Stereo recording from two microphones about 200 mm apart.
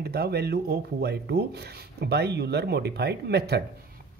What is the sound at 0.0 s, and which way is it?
Speech, 55° right (ahead or behind).